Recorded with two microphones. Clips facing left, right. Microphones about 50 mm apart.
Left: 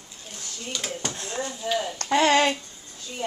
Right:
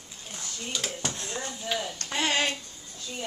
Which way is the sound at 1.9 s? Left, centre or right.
Left.